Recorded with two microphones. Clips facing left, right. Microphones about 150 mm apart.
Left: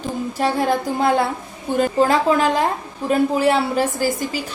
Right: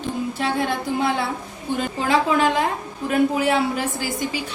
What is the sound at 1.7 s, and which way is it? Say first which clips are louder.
A woman's voice: left 5 dB; 40° left (ahead or behind).